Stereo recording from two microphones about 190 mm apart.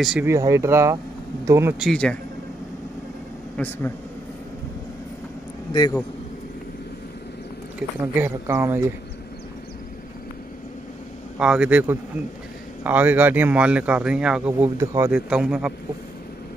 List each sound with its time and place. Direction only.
0.0 s a man's voice: 5° right (ahead or behind)
0.3 s speech: 15° right (ahead or behind)
1.8 s a man's voice: 5° left (ahead or behind)
3.5 s a man's voice: 10° left (ahead or behind)
5.7 s a man's voice: 25° left (ahead or behind)
7.8 s a man's voice: 5° right (ahead or behind)
11.3 s a man's voice: 5° right (ahead or behind)